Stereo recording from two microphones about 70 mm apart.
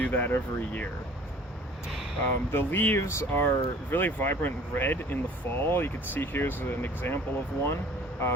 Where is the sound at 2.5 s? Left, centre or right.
Left.